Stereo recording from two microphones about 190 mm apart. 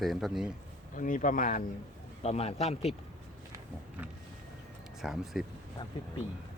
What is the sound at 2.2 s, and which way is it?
Speech, 35° left (ahead or behind).